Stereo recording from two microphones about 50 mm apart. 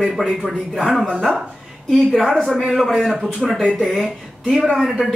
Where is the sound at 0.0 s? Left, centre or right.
Centre.